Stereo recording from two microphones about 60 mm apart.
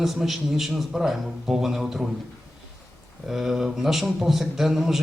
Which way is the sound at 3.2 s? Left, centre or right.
Centre.